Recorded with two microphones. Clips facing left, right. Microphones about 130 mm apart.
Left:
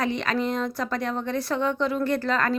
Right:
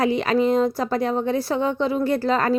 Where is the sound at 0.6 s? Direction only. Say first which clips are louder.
Right 7 dB; 30° right (ahead or behind).